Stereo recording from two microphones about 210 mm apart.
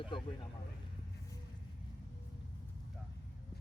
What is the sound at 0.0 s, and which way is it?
Speech, 25° left (ahead or behind).